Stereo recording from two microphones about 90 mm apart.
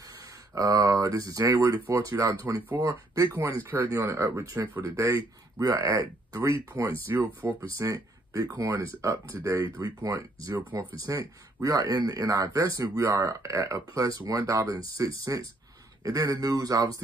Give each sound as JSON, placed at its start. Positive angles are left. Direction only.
{"t": 0.6, "sound": "speech", "side_deg": -40}
{"t": 5.6, "sound": "speech", "side_deg": -40}
{"t": 7.6, "sound": "speech", "side_deg": -35}